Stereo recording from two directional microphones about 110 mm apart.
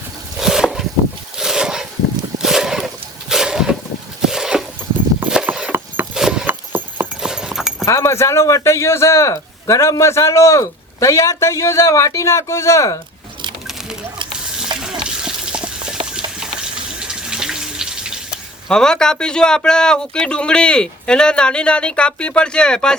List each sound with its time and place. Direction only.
0.3 s a sound: 5° right (ahead or behind)
5.2 s horse: 10° right (ahead or behind)
6.1 s wood: 5° right (ahead or behind)
6.5 s horse: 20° right (ahead or behind)
7.2 s clip-clop: 5° right (ahead or behind)
7.9 s a man's voice: 25° left (ahead or behind)
13.7 s a sound: 5° right (ahead or behind)
17.0 s water tap: 5° right (ahead or behind)
18.7 s speech: 5° left (ahead or behind)